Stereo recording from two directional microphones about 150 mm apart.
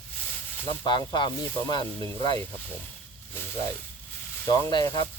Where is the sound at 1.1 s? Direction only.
30° left (ahead or behind).